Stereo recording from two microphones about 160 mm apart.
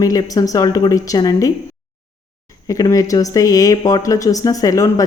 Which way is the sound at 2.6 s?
20° left (ahead or behind).